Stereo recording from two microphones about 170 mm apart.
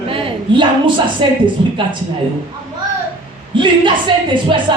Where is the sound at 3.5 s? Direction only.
30° right (ahead or behind).